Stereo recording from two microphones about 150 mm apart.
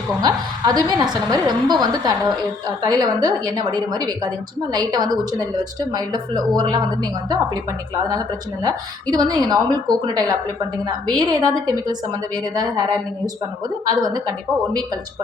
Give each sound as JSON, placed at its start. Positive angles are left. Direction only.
{"t": 0.2, "sound": "a woman's voice", "side_deg": -25}
{"t": 8.6, "sound": "a woman's voice", "side_deg": -25}